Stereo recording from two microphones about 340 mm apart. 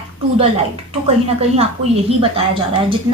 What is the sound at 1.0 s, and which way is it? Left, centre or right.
Speech, centre.